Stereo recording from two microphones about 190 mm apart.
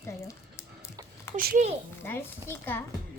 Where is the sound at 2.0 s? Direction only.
10° left (ahead or behind).